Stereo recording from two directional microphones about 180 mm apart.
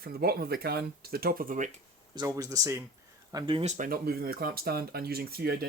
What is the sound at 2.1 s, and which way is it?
Speech, 20° right (ahead or behind).